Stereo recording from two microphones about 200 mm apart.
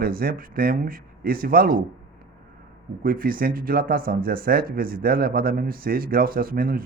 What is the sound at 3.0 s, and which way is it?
Speech, 45° right (ahead or behind).